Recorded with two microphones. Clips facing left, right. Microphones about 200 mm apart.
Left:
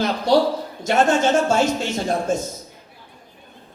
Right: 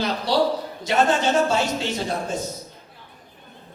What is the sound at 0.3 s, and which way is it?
Music, 45° left (ahead or behind).